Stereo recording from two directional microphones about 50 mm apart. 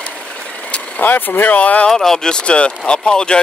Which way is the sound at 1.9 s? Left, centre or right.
Centre.